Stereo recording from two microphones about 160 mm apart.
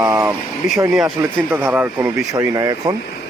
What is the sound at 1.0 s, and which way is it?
A man's voice, 5° right (ahead or behind).